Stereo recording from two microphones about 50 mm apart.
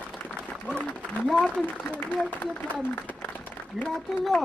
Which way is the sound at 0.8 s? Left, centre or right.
Left.